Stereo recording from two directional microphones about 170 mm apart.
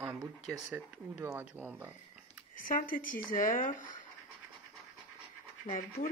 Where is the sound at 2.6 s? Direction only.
55° left (ahead or behind).